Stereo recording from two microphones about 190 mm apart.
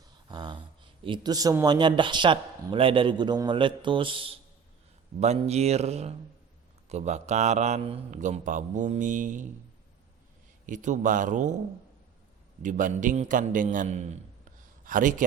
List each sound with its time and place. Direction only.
0.3 s a sound: 20° right (ahead or behind)
1.0 s a man's voice: 25° right (ahead or behind); by 9.5 s 40° right (ahead or behind)
10.7 s a man's voice: 40° right (ahead or behind)
12.6 s a man's voice: 40° right (ahead or behind)